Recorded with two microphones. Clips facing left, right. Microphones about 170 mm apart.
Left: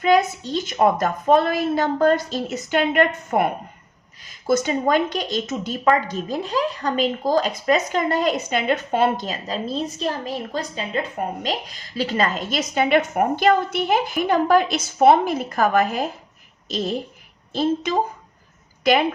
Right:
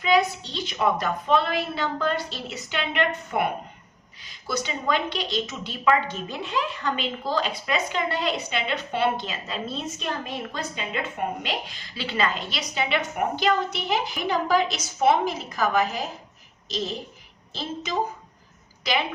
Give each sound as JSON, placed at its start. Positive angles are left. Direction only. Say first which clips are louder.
{"t": 0.0, "sound": "a woman's voice", "louder": "left 4 dB", "side_deg": 45}